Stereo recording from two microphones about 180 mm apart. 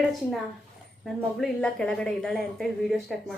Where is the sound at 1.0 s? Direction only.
Centre (ahead or behind).